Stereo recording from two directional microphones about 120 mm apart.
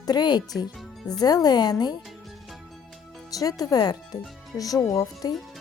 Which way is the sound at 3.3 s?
30° left (ahead or behind).